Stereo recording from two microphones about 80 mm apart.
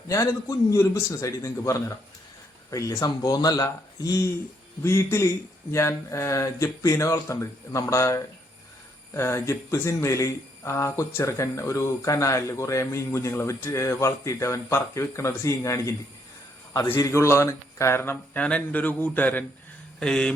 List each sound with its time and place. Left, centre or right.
0.1 s speech: left
3.1 s speech: left
18.4 s speech: centre
20.0 s speech: centre